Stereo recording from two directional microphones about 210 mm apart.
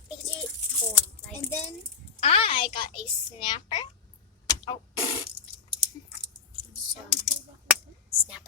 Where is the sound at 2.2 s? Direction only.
30° left (ahead or behind).